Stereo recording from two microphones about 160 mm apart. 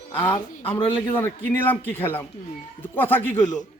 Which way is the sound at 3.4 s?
50° left (ahead or behind).